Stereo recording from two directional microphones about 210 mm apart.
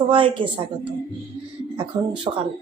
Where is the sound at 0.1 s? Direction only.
25° right (ahead or behind).